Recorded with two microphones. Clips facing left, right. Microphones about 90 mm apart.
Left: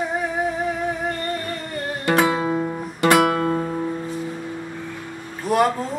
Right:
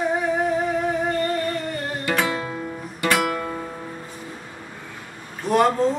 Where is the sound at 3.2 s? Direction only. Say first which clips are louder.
Left 6 dB; 45° left (ahead or behind).